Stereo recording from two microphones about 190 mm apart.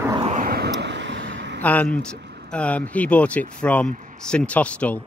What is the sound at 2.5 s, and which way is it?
Speech, 5° left (ahead or behind).